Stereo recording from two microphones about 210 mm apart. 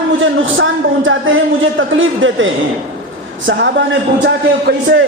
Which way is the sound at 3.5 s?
55° right (ahead or behind).